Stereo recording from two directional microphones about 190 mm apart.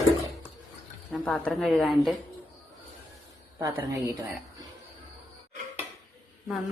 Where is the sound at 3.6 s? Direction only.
15° right (ahead or behind).